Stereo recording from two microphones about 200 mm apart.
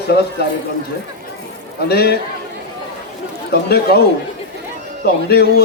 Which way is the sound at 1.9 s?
50° left (ahead or behind).